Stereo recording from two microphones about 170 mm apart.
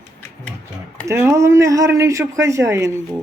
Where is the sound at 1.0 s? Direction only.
15° right (ahead or behind).